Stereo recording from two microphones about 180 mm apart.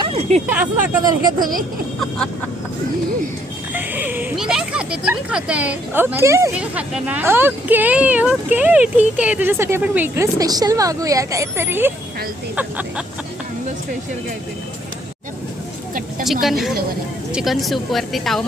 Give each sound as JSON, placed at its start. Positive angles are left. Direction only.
{"t": 0.0, "sound": "speech", "side_deg": -35}
{"t": 0.4, "sound": "speech", "side_deg": -10}
{"t": 1.4, "sound": "speech", "side_deg": -50}
{"t": 2.0, "sound": "a woman's voice", "side_deg": 5}
{"t": 3.8, "sound": "speech", "side_deg": -10}
{"t": 16.2, "sound": "a woman's voice", "side_deg": 0}